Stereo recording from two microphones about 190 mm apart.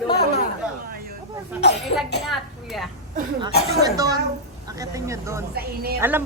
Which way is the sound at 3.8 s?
20° right (ahead or behind).